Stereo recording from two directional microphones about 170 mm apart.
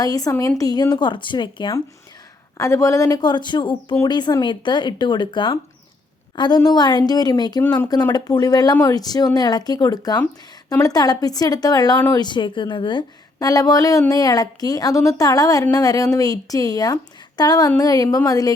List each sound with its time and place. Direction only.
0.0 s a woman's voice: 20° left (ahead or behind)